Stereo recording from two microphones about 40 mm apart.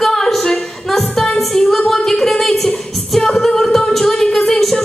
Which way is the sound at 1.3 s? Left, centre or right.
Centre.